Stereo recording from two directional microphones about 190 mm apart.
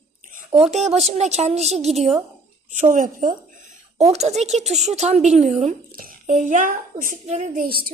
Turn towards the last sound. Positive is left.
turn(degrees=-45)  # may be behind; listen again after turning